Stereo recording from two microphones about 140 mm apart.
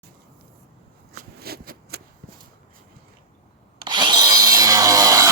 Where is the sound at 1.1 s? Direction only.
90° right.